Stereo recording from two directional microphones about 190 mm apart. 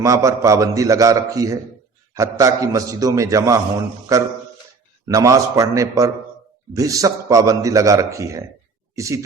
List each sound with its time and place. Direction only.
0.0 s a man's voice: 15° right (ahead or behind)
5.0 s a man's voice: 15° right (ahead or behind)